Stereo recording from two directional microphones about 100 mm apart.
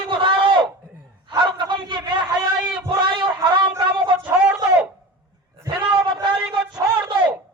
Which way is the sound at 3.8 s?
55° right (ahead or behind).